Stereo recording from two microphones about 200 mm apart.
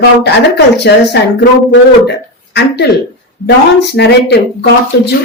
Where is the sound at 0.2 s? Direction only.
55° left (ahead or behind).